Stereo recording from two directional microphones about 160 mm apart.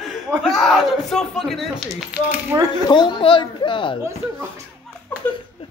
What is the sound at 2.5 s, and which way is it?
Speech, 20° right (ahead or behind).